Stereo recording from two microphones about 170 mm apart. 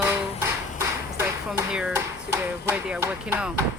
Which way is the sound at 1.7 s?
5° right (ahead or behind).